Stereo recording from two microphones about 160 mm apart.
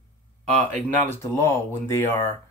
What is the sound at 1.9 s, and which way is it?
Speech, 15° left (ahead or behind).